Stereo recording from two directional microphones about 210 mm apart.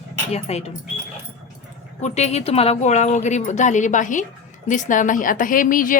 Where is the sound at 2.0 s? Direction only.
30° left (ahead or behind).